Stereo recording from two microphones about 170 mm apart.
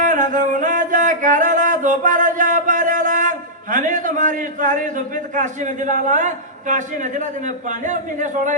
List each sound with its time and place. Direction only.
0.0 s singing: 50° right (ahead or behind)